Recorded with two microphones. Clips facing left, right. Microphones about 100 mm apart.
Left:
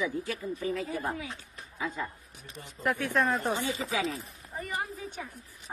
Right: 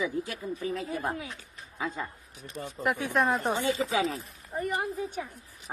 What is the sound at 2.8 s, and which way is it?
Speech, 15° right (ahead or behind).